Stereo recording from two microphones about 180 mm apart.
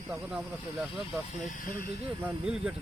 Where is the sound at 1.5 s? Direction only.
50° left (ahead or behind).